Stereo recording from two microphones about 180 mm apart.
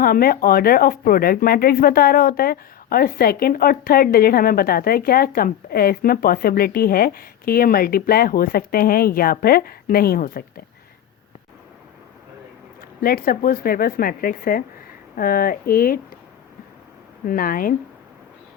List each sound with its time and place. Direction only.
0.0 s speech: 55° left (ahead or behind)
13.0 s speech: 55° left (ahead or behind)
17.2 s speech: 50° left (ahead or behind)